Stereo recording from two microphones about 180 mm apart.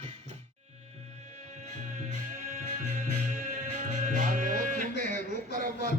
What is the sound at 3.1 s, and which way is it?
Music, 45° right (ahead or behind).